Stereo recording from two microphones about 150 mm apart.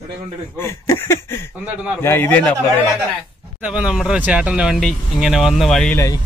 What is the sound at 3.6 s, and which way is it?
Speech, 5° right (ahead or behind).